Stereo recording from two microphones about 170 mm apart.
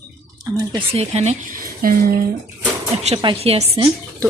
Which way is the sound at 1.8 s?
55° right (ahead or behind).